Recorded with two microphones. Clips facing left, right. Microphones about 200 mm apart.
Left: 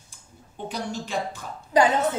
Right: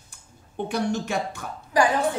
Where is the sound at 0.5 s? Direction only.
60° right (ahead or behind).